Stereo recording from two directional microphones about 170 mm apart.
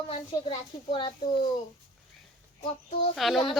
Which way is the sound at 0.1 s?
30° left (ahead or behind).